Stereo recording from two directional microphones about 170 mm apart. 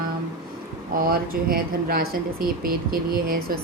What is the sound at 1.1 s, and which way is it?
A woman's voice, 60° right (ahead or behind).